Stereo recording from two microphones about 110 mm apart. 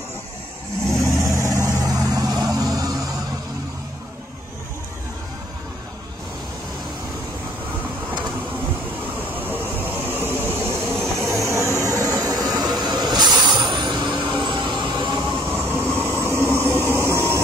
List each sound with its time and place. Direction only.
1.1 s vehicle: 30° right (ahead or behind)
9.3 s vehicle: 15° right (ahead or behind); by 15.2 s 45° right (ahead or behind)
15.5 s train: 20° right (ahead or behind)
16.8 s a sound: 25° right (ahead or behind)